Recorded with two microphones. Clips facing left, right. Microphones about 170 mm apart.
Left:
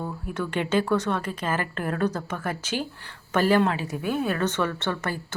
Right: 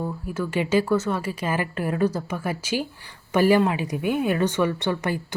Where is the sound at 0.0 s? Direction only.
5° right (ahead or behind).